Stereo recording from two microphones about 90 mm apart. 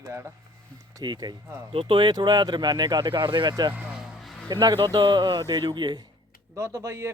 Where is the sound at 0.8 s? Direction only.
45° right (ahead or behind).